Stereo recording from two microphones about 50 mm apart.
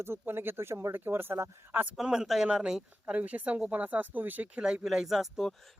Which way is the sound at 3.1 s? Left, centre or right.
Right.